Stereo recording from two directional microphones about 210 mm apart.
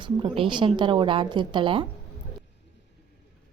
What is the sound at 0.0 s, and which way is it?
A woman's voice, 25° right (ahead or behind).